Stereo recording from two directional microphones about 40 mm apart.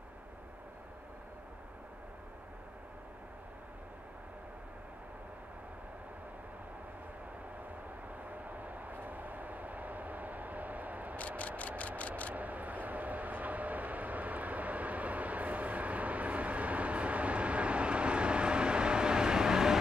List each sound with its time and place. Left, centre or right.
8.5 s vehicle: right
11.1 s vehicle: left
12.4 s vehicle: right; by 19.8 s centre